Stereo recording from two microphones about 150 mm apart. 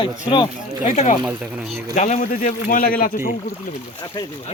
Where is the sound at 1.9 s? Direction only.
55° left (ahead or behind); by 3.2 s 70° left (ahead or behind).